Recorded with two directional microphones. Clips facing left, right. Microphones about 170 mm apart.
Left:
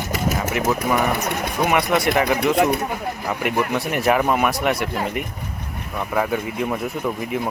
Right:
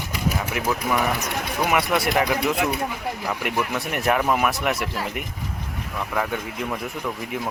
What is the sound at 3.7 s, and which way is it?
Speech, centre (ahead or behind).